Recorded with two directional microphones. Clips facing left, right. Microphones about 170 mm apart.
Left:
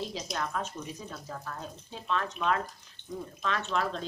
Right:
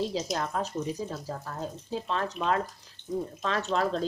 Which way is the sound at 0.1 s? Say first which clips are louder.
Right 4 dB; 30° right (ahead or behind).